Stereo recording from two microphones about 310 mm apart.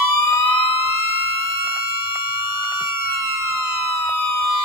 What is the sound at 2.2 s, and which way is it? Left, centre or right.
Fire alarm, right.